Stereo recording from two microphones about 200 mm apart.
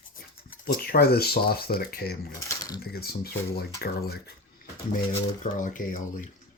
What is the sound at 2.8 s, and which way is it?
Speech, 50° left (ahead or behind).